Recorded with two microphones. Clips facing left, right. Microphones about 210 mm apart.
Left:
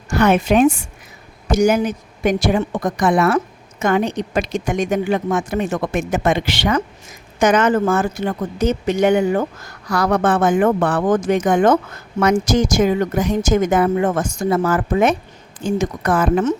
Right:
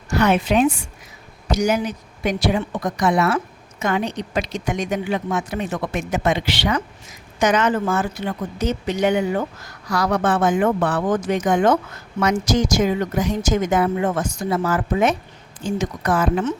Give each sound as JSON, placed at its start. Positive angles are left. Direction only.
{"t": 0.1, "sound": "a woman's voice", "side_deg": 50}